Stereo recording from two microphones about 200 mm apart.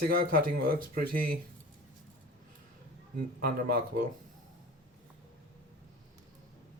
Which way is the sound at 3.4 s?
45° right (ahead or behind).